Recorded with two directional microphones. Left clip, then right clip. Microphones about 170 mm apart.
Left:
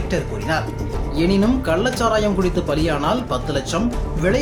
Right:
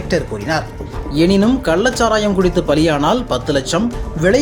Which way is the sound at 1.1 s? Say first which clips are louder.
Right 5 dB; 40° right (ahead or behind).